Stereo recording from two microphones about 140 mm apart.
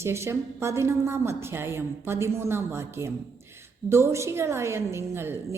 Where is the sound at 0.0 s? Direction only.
20° right (ahead or behind).